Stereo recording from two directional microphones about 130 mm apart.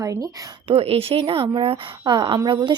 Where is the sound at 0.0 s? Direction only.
25° right (ahead or behind).